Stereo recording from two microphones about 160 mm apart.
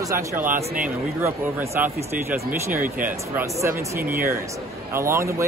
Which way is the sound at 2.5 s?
60° right (ahead or behind).